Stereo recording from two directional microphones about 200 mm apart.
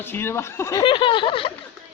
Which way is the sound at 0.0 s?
10° left (ahead or behind).